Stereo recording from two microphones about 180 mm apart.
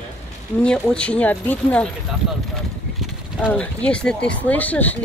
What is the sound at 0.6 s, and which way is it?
Speech, 5° left (ahead or behind).